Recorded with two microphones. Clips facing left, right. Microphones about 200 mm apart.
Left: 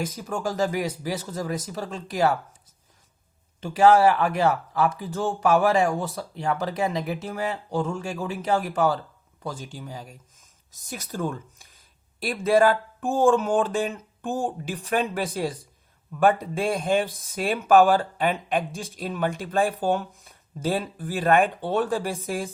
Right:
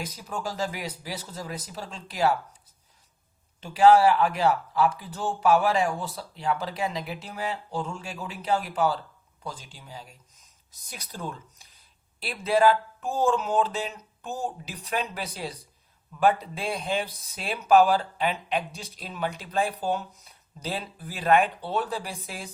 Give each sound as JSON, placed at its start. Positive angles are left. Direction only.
{"t": 0.0, "sound": "speech", "side_deg": 45}
{"t": 3.6, "sound": "speech", "side_deg": 45}